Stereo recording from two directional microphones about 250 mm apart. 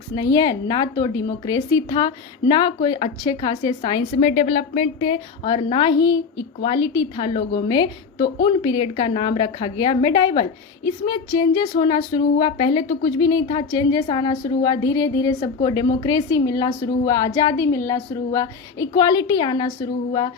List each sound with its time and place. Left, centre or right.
0.2 s a woman's voice: centre